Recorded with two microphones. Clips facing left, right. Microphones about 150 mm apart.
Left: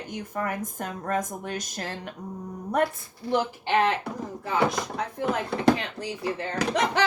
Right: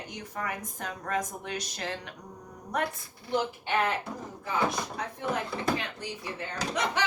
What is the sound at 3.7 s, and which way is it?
Speech, 70° left (ahead or behind).